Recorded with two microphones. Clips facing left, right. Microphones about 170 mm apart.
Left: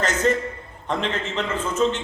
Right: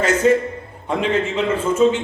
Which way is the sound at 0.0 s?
10° right (ahead or behind).